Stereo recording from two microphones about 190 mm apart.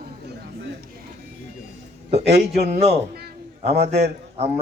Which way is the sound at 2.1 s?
35° right (ahead or behind).